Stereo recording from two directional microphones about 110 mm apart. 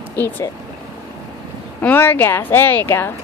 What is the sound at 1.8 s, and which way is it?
A woman's voice, 20° left (ahead or behind).